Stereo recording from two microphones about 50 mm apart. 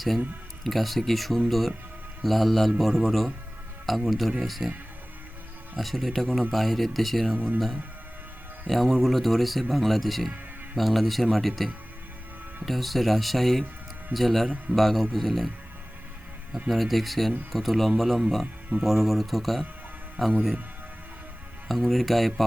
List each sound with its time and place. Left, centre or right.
0.6 s speech: centre
5.7 s speech: centre
7.3 s speech: right
8.6 s speech: centre
16.6 s speech: centre
21.7 s speech: centre